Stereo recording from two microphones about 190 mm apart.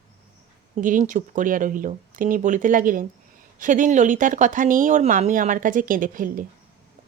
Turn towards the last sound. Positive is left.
turn(degrees=-45)  # may be behind; listen again after turning